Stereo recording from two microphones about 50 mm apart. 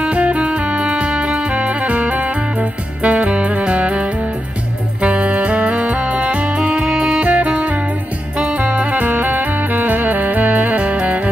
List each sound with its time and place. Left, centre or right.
0.0 s music: right